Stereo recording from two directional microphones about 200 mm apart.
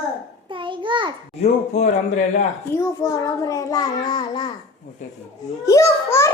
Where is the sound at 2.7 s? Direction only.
15° left (ahead or behind).